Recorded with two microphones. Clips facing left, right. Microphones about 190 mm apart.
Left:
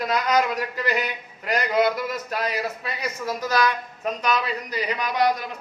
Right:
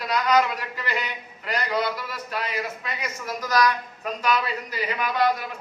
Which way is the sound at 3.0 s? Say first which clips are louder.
Left 5 dB; 30° left (ahead or behind).